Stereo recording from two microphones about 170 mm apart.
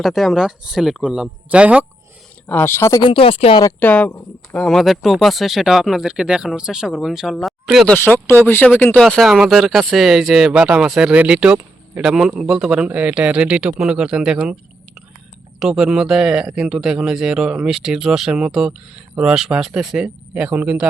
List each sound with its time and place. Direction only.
0.0 s speech: centre (ahead or behind)
2.5 s speech: 15° left (ahead or behind)
3.0 s speech: 30° left (ahead or behind)
3.6 s speech: 15° left (ahead or behind)
7.9 s speech: 10° left (ahead or behind); by 14.5 s 5° right (ahead or behind)
15.5 s speech: centre (ahead or behind)